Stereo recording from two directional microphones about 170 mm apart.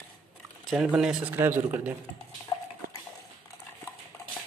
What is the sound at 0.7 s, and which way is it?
Speech, 5° right (ahead or behind).